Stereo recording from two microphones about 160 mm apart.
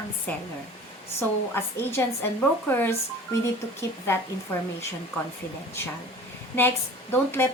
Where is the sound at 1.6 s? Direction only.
15° left (ahead or behind).